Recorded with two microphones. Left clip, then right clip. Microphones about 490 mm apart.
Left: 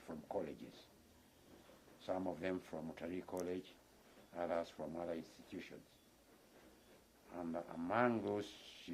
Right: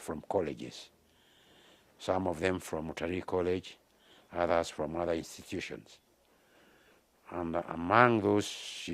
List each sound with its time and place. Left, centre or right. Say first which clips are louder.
0.1 s speech: right 12 dB; right
2.0 s speech: right 11 dB; right
7.3 s speech: right 11 dB; right